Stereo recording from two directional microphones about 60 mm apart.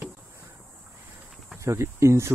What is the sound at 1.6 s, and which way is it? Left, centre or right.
Speech, right.